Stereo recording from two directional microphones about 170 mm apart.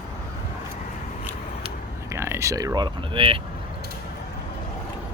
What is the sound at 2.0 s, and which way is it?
Speech, 15° right (ahead or behind).